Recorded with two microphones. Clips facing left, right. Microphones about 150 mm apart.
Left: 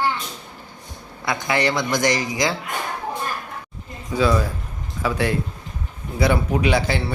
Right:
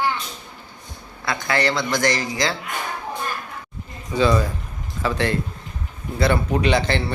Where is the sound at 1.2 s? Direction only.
15° left (ahead or behind).